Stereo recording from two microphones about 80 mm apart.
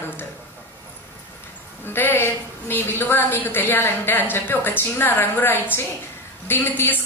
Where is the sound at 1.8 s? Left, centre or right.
Left.